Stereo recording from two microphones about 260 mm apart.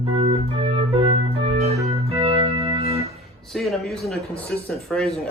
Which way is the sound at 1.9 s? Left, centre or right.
Right.